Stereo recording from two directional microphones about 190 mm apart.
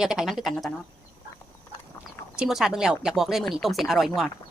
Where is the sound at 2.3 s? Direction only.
5° right (ahead or behind).